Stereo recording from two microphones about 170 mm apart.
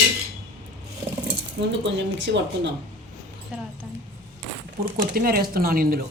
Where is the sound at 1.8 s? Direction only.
90° right.